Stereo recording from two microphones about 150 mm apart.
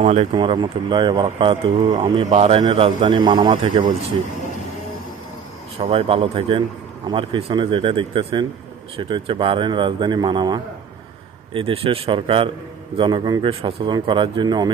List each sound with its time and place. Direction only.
0.0 s speech: 45° right (ahead or behind)
0.3 s speech: 30° right (ahead or behind)
5.8 s speech: 40° right (ahead or behind)